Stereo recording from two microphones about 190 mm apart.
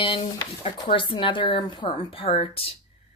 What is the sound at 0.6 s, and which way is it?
A woman's voice, 30° left (ahead or behind).